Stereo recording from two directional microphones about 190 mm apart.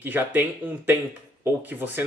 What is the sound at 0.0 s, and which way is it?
Speech, 10° right (ahead or behind).